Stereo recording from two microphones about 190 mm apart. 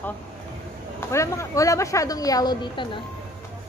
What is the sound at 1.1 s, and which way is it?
A woman's voice, 15° left (ahead or behind).